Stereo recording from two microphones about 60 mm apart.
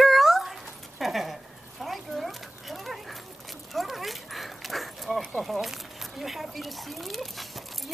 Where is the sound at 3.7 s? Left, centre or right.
Centre.